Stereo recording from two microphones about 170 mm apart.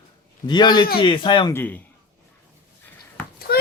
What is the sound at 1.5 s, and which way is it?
Speech, 10° left (ahead or behind).